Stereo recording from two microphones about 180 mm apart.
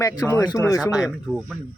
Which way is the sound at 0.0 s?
15° left (ahead or behind).